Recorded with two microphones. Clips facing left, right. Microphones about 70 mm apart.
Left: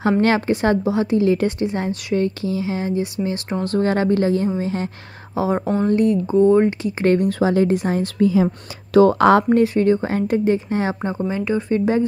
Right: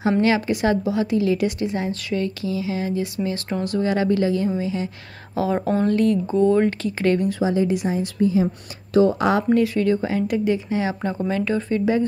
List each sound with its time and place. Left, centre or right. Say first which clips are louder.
0.2 s speech: left 2 dB; left
3.7 s speech: left 3 dB; left
5.3 s speech: left 1 dB; left
7.1 s speech: left 3 dB; left
8.2 s speech: left 3 dB; left
8.9 s speech: left 5 dB; left
9.5 s speech: left 3 dB; left
11.0 s speech: left 1 dB; left
11.2 s speech: left 1 dB; centre
11.7 s speech: left 2 dB; left